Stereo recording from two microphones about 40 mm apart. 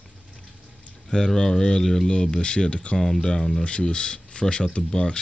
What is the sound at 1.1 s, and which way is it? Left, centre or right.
Speech, centre.